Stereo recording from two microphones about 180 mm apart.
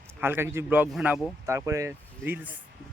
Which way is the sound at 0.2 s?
10° right (ahead or behind).